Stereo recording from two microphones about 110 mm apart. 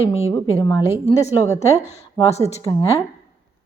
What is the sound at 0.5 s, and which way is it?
A woman's voice, 30° left (ahead or behind).